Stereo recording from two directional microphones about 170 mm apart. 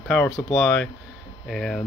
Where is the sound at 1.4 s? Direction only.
Centre (ahead or behind).